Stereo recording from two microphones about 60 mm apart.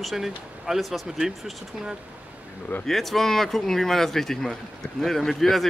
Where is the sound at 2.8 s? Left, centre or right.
Centre.